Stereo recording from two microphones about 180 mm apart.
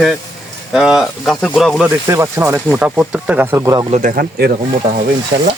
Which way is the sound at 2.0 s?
15° right (ahead or behind).